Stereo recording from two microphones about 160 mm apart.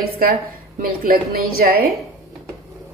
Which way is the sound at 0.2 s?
65° right (ahead or behind).